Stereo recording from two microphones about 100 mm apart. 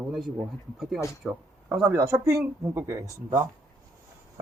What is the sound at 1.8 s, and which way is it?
Speech, 25° right (ahead or behind).